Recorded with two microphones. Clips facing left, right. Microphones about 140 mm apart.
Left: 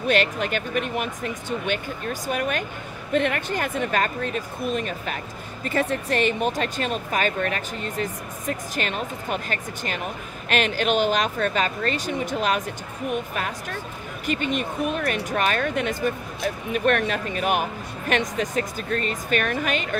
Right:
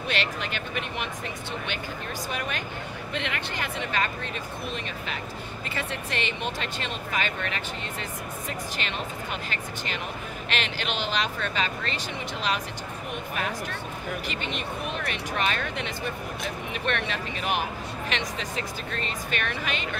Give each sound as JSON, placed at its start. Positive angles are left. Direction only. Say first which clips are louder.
{"t": 0.1, "sound": "speech", "louder": "left 9 dB", "side_deg": 45}